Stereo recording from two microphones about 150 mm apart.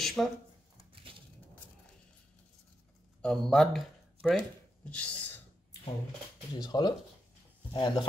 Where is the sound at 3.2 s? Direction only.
5° left (ahead or behind).